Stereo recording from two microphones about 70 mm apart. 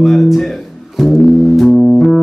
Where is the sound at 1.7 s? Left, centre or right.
Centre.